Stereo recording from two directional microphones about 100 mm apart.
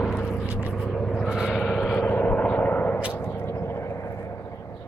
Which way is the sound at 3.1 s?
25° left (ahead or behind).